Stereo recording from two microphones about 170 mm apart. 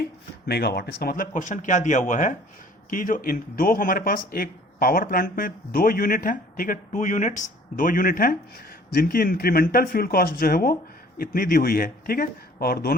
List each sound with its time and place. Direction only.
0.0 s speech: 70° left (ahead or behind)